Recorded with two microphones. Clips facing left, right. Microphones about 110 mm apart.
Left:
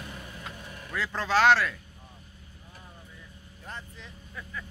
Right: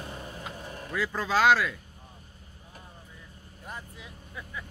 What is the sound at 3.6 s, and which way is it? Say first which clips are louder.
Vehicle: right 1 dB; 10° right (ahead or behind).